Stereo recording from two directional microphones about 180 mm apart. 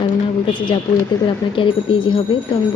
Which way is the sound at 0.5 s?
25° left (ahead or behind).